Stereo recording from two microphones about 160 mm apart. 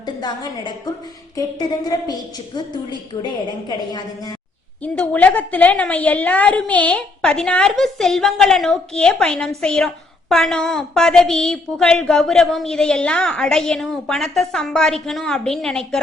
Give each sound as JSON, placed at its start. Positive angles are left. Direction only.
{"t": 0.0, "sound": "a woman's voice", "side_deg": 25}
{"t": 3.7, "sound": "a woman's voice", "side_deg": 25}
{"t": 4.8, "sound": "a woman's voice", "side_deg": 10}